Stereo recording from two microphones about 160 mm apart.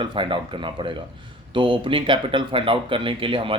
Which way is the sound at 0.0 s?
30° right (ahead or behind).